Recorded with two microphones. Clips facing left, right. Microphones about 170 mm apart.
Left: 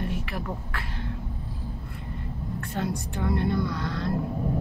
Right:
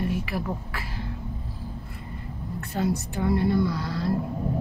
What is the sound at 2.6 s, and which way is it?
Speech, centre (ahead or behind).